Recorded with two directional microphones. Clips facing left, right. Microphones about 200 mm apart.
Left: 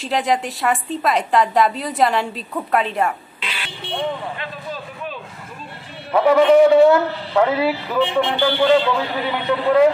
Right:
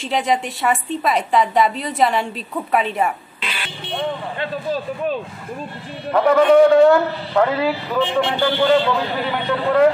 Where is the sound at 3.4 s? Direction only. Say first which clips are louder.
Right 4 dB; 50° right (ahead or behind).